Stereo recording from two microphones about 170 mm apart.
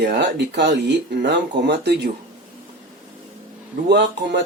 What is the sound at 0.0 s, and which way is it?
Speech, 85° right.